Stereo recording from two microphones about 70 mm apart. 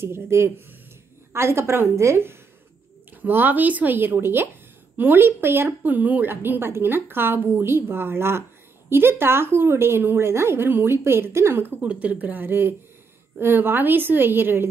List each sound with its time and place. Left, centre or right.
0.0 s a woman's voice: right
3.2 s a woman's voice: right
11.8 s a woman's voice: right